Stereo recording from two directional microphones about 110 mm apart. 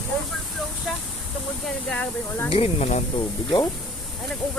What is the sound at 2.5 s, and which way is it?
Speech, 60° left (ahead or behind).